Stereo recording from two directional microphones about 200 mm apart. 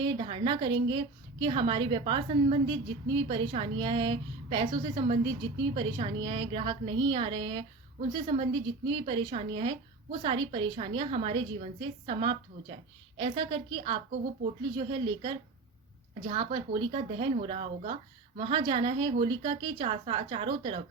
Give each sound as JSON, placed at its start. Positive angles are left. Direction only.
{"t": 0.0, "sound": "a woman's voice", "side_deg": -25}